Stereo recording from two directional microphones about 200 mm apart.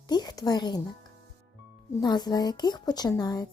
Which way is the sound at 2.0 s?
20° left (ahead or behind).